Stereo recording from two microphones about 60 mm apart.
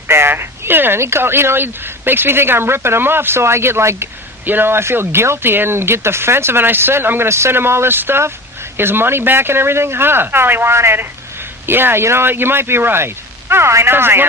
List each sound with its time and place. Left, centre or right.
0.1 s speech: right
0.9 s speech: right
4.4 s speech: right